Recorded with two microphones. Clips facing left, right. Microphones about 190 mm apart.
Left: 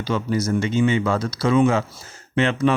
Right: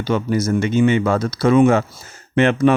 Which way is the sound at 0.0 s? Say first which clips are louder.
Right 4 dB; 55° right (ahead or behind).